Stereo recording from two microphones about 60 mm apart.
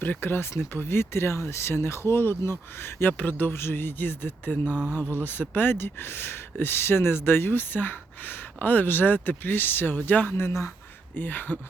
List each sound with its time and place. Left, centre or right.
0.0 s speech: left
11.1 s speech: left